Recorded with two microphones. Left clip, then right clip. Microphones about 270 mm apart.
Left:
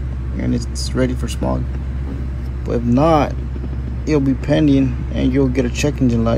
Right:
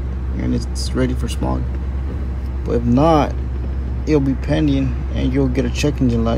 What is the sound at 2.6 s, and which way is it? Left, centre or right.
Speech, centre.